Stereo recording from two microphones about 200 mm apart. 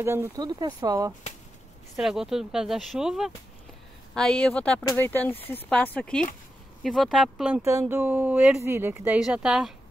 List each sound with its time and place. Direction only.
0.0 s speech: 10° right (ahead or behind)
2.0 s speech: centre (ahead or behind)
7.6 s speech: 15° right (ahead or behind)